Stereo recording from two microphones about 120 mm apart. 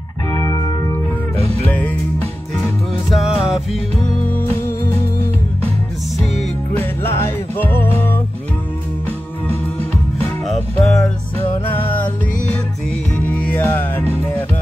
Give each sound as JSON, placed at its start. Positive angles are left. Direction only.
{"t": 0.3, "sound": "music", "side_deg": 30}
{"t": 1.7, "sound": "music", "side_deg": 15}
{"t": 3.1, "sound": "music", "side_deg": 0}
{"t": 6.8, "sound": "music", "side_deg": 20}
{"t": 10.8, "sound": "music", "side_deg": 5}
{"t": 13.2, "sound": "music", "side_deg": 10}